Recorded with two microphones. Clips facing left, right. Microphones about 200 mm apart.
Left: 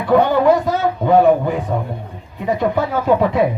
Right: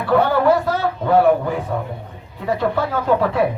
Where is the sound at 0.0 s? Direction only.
15° left (ahead or behind).